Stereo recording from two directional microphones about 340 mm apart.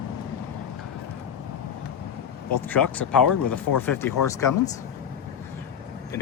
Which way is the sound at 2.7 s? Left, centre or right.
Centre.